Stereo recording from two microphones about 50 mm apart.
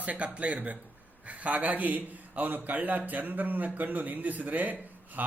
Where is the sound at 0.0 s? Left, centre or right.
Right.